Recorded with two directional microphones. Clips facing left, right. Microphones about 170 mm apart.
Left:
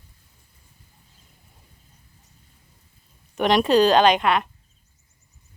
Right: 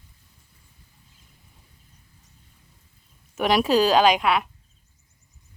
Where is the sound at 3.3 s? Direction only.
5° right (ahead or behind).